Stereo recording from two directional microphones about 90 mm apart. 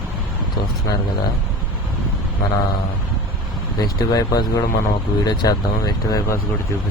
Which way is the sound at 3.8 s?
45° left (ahead or behind).